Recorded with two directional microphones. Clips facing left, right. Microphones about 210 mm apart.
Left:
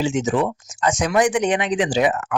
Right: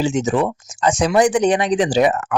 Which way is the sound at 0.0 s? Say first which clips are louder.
Right 2 dB; 35° right (ahead or behind).